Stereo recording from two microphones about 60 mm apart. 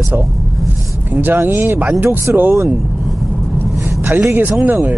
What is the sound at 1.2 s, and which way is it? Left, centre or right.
Speech, right.